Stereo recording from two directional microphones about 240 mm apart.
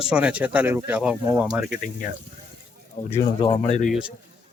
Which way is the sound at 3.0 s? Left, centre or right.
Left.